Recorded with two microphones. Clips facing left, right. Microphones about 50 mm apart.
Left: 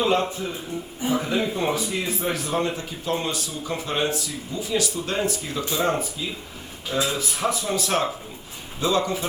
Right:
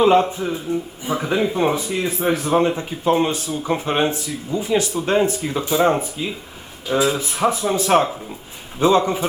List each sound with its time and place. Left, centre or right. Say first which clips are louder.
0.0 s speech: right 7 dB; right